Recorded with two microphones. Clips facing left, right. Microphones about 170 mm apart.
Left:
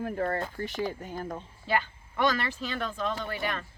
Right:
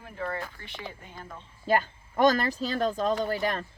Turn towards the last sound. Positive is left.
turn(degrees=-35)  # may be behind; listen again after turning